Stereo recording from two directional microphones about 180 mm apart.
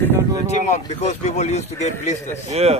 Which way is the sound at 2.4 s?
35° right (ahead or behind).